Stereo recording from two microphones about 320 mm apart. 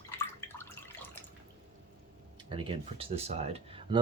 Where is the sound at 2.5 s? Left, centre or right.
Centre.